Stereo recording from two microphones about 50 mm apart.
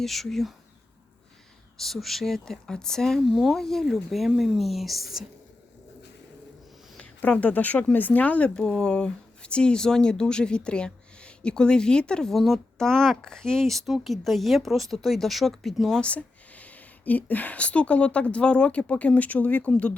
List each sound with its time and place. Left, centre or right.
0.0 s speech: centre
1.8 s speech: centre
3.2 s speech: centre
3.6 s speech: centre
3.8 s speech: centre
7.0 s speech: left
8.6 s speech: centre
8.9 s speech: centre
12.3 s speech: centre
12.8 s speech: centre
16.0 s speech: left